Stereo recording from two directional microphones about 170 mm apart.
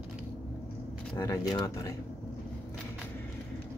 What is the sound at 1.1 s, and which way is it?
Speech, 20° left (ahead or behind).